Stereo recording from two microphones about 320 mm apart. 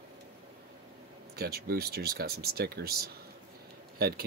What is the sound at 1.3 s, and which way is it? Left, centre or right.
Speech, right.